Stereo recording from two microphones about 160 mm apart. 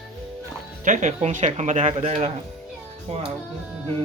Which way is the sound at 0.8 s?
50° right (ahead or behind).